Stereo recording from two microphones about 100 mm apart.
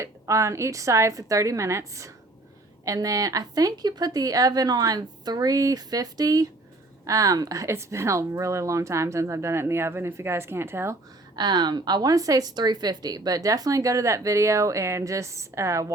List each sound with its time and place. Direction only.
0.0 s a woman's voice: 30° right (ahead or behind)
11.3 s speech: 45° right (ahead or behind)